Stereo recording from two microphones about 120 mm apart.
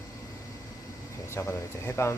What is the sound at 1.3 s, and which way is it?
Speech, 20° left (ahead or behind).